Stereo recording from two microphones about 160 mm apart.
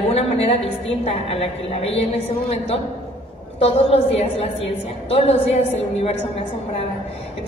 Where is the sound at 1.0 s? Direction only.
40° left (ahead or behind).